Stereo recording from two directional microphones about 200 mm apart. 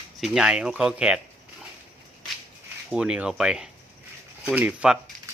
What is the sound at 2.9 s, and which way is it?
Speech, 5° right (ahead or behind).